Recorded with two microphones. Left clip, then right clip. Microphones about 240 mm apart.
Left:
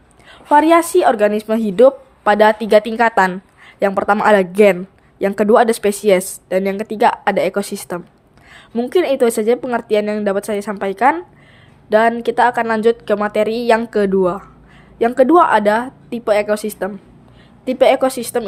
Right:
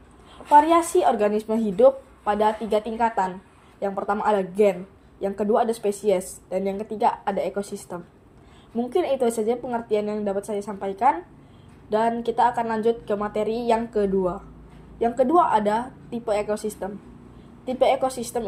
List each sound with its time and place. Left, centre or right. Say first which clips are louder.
0.4 s a woman's voice: left 5 dB; left